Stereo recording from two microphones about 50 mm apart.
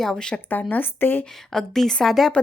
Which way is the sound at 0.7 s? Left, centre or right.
Left.